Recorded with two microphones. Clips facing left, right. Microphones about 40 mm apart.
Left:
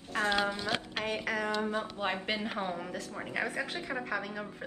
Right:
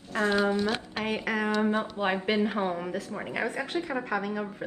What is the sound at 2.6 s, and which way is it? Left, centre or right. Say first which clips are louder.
Speech: right 6 dB; centre.